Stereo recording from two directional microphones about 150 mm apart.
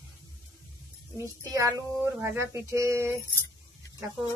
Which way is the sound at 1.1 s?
20° right (ahead or behind).